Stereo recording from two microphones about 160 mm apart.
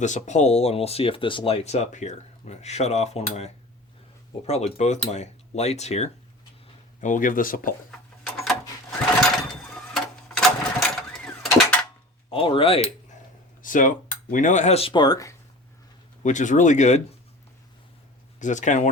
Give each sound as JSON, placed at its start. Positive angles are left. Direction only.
{"t": 0.0, "sound": "speech", "side_deg": 50}
{"t": 7.0, "sound": "speech", "side_deg": 55}
{"t": 9.9, "sound": "a sound", "side_deg": 0}
{"t": 12.3, "sound": "speech", "side_deg": 35}
{"t": 13.6, "sound": "speech", "side_deg": 55}
{"t": 16.2, "sound": "speech", "side_deg": 50}
{"t": 18.3, "sound": "speech", "side_deg": 50}